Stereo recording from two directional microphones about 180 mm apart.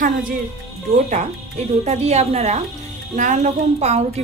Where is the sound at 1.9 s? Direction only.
35° right (ahead or behind).